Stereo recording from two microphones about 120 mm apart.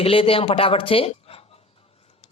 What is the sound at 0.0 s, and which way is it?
Speech, 50° left (ahead or behind).